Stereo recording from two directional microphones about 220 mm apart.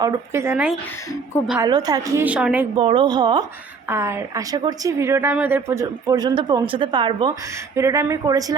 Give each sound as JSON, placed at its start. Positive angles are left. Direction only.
{"t": 0.0, "sound": "a woman's voice", "side_deg": -10}
{"t": 1.6, "sound": "a woman's voice", "side_deg": -15}
{"t": 2.2, "sound": "a woman's voice", "side_deg": -5}
{"t": 2.7, "sound": "a woman's voice", "side_deg": -25}